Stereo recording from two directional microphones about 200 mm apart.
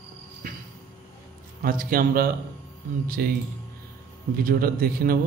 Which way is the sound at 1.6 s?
45° right (ahead or behind).